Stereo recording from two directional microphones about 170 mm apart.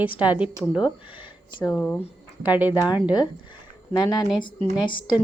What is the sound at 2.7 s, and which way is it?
A woman's voice, 25° left (ahead or behind).